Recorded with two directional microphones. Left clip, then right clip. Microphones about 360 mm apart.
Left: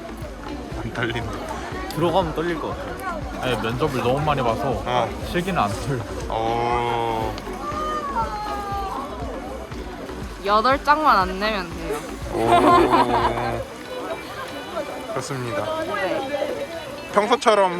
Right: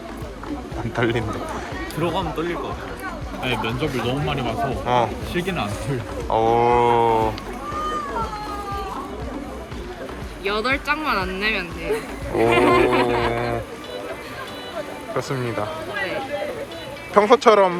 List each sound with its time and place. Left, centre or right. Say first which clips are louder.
0.9 s speech: right 4 dB; centre
2.0 s speech: left 4 dB; left
3.4 s speech: left 1 dB; centre
10.4 s speech: left 4 dB; centre
17.2 s speech: right 3 dB; centre